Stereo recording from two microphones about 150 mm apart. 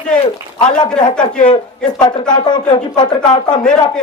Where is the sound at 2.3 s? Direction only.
30° left (ahead or behind).